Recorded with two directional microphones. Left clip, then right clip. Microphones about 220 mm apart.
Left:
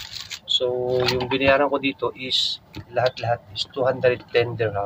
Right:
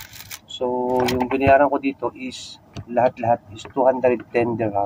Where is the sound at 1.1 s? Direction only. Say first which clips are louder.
Right 5 dB; 10° left (ahead or behind).